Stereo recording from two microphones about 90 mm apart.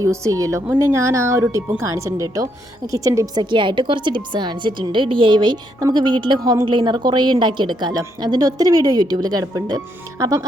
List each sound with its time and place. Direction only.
0.0 s a woman's voice: 35° right (ahead or behind)
3.5 s a woman's voice: 65° right (ahead or behind)
6.4 s a woman's voice: 45° right (ahead or behind)
6.7 s a woman's voice: 60° right (ahead or behind); by 10.4 s 40° right (ahead or behind)